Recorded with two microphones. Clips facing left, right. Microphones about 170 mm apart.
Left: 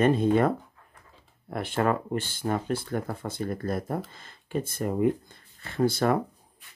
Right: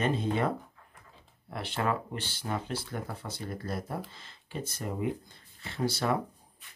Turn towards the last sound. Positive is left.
turn(degrees=55)  # may be behind; listen again after turning